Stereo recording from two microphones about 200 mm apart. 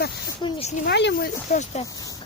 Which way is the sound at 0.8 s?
60° left (ahead or behind).